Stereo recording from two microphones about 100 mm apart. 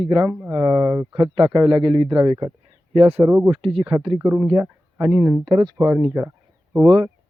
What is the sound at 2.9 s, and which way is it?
Speech, 85° right.